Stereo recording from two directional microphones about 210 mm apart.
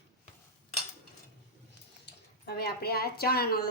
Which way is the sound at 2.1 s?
50° left (ahead or behind).